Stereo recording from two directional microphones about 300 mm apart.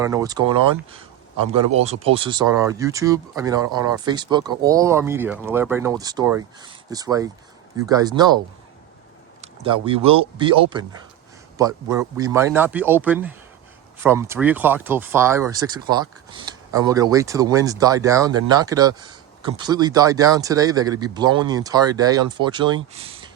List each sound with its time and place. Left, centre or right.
0.0 s speech: centre
1.8 s speech: centre
9.4 s speech: centre